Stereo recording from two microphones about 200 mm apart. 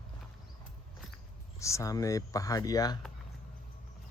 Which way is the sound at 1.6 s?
15° left (ahead or behind).